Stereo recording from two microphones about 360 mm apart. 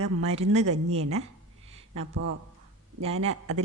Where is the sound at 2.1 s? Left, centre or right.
Right.